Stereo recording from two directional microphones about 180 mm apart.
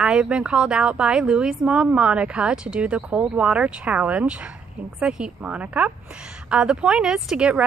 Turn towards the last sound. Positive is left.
turn(degrees=-5)  # may be behind; listen again after turning